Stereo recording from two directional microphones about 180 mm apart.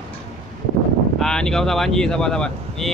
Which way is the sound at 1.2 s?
5° left (ahead or behind).